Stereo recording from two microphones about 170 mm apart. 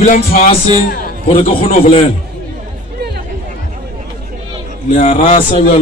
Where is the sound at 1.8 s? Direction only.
35° left (ahead or behind).